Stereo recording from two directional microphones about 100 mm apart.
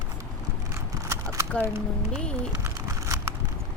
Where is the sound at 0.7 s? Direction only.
30° right (ahead or behind).